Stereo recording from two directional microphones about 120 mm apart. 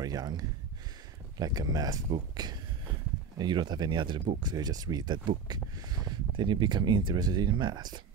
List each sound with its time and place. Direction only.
0.0 s speech: 30° right (ahead or behind)